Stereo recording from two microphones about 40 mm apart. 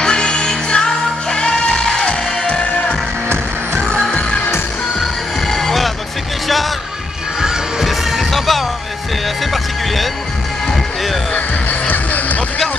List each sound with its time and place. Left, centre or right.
0.0 s music: left
5.5 s music: centre
7.8 s music: centre
11.9 s music: left